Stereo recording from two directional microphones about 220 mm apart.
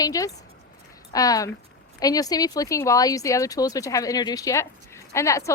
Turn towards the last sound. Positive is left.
turn(degrees=15)  # may be behind; listen again after turning